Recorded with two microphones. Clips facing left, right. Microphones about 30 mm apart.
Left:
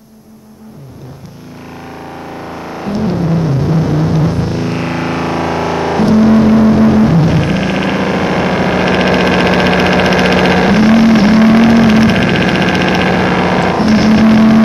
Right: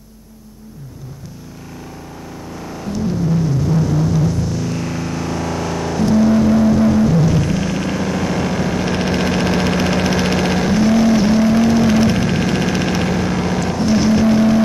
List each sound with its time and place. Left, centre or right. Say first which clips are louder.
2.6 s music: left 5 dB; left